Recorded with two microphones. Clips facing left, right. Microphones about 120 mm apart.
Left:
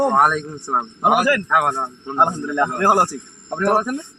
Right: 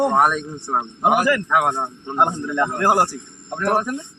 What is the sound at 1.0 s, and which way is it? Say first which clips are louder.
Speech: left 1 dB; 15° left (ahead or behind).